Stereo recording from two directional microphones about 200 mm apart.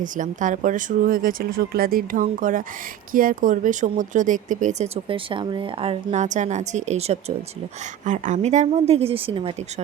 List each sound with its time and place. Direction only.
0.0 s a woman's voice: 40° right (ahead or behind)
5.0 s a woman's voice: 25° right (ahead or behind)